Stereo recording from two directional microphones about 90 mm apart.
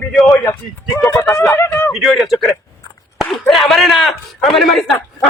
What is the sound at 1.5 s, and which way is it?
Speech, 25° left (ahead or behind).